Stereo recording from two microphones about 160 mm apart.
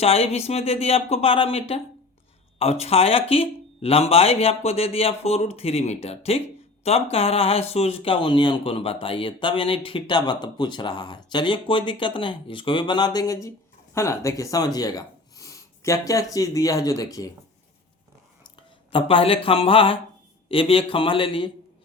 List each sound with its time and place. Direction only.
0.0 s speech: 40° left (ahead or behind); by 17.3 s 20° left (ahead or behind)
18.9 s speech: 35° left (ahead or behind)